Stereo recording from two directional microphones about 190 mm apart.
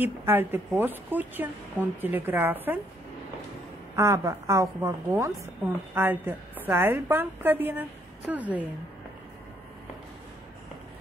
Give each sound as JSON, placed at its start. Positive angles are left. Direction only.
{"t": 0.0, "sound": "speech", "side_deg": -10}
{"t": 3.9, "sound": "speech", "side_deg": -15}